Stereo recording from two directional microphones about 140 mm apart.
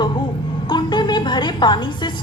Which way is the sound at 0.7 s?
35° left (ahead or behind).